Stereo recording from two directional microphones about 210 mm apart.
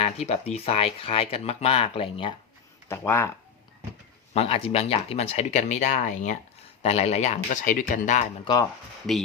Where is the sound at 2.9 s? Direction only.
10° left (ahead or behind).